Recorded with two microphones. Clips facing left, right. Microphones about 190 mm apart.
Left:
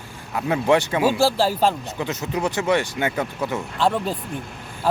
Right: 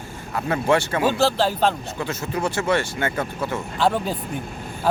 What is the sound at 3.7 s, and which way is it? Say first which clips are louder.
Speech: right 1 dB; centre (ahead or behind).